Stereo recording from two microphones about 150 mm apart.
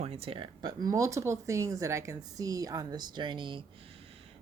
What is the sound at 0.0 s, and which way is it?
Speech, 40° right (ahead or behind).